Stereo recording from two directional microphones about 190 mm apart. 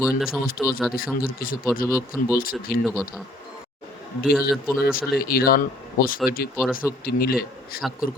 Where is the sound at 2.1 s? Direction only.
10° left (ahead or behind).